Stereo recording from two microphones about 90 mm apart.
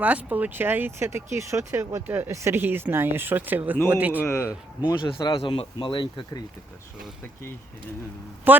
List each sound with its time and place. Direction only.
0.0 s speech: 15° right (ahead or behind)
4.2 s speech: 35° left (ahead or behind)
4.9 s speech: 55° left (ahead or behind)
5.5 s speech: 70° left (ahead or behind)
8.5 s speech: 20° right (ahead or behind)